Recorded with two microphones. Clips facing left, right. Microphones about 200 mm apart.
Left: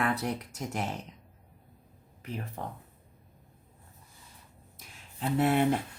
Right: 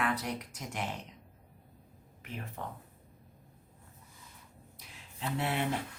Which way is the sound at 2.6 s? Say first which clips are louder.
Even; 40° left (ahead or behind).